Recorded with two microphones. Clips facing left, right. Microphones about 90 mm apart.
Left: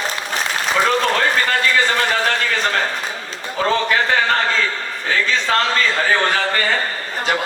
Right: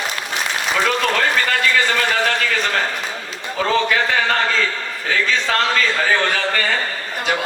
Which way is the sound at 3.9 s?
35° left (ahead or behind).